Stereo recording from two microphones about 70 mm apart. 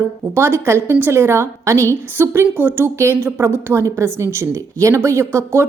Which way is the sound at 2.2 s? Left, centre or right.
Right.